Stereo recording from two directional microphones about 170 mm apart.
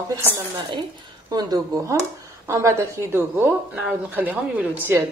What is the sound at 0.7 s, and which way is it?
A woman's voice, 25° right (ahead or behind).